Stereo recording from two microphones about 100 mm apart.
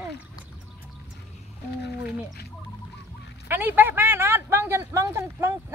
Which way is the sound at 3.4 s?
20° right (ahead or behind).